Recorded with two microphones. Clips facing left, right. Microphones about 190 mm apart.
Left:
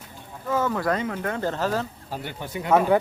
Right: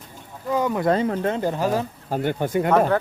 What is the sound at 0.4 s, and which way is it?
Speech, 15° right (ahead or behind).